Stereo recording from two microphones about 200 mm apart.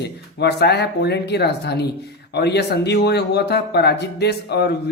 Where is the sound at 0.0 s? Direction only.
55° left (ahead or behind).